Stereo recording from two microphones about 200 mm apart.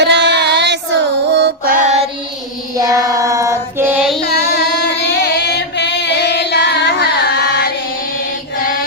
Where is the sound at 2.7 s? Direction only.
15° right (ahead or behind).